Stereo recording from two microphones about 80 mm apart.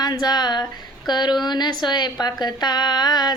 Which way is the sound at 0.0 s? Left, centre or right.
Left.